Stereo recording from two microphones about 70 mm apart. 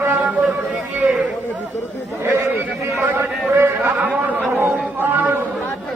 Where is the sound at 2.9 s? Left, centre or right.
Right.